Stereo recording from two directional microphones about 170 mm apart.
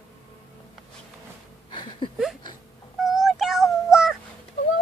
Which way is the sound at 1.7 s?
30° left (ahead or behind).